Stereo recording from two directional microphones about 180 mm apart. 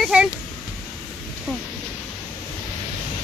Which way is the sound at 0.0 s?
5° right (ahead or behind).